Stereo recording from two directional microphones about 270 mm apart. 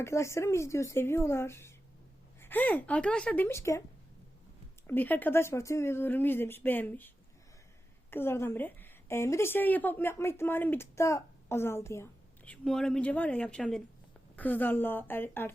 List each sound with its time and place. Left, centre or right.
0.0 s a woman's voice: centre
4.9 s a woman's voice: centre
8.1 s a woman's voice: centre